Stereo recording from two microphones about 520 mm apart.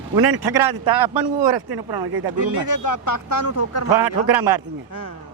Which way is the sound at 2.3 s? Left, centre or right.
Left.